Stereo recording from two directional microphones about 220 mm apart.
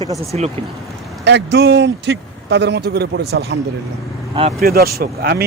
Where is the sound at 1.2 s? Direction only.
50° right (ahead or behind).